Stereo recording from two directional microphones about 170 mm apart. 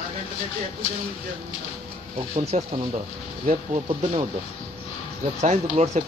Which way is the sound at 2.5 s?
40° right (ahead or behind).